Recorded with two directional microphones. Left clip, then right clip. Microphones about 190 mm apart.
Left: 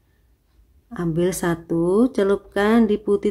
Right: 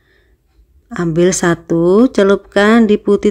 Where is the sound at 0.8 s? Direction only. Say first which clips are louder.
Right 9 dB; 20° right (ahead or behind).